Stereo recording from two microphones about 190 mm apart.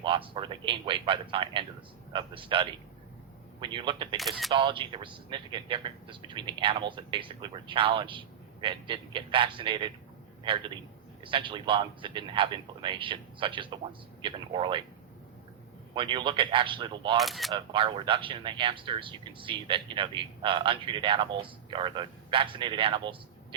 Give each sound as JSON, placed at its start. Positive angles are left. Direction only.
{"t": 0.3, "sound": "speech", "side_deg": -25}
{"t": 4.2, "sound": "speech", "side_deg": 0}
{"t": 4.5, "sound": "a man's voice", "side_deg": -25}
{"t": 16.0, "sound": "speech", "side_deg": -25}
{"t": 17.2, "sound": "speech", "side_deg": 0}
{"t": 17.5, "sound": "speech", "side_deg": -25}